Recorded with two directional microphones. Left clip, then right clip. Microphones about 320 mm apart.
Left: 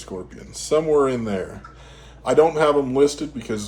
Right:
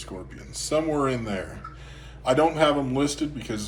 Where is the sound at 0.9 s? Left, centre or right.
Left.